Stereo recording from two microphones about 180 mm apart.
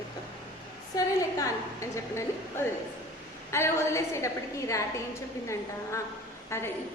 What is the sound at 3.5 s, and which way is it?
A woman's voice, 15° left (ahead or behind).